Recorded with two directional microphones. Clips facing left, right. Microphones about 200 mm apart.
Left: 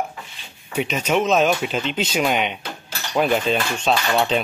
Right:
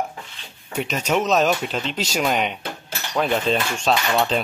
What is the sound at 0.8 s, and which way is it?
Speech, centre (ahead or behind).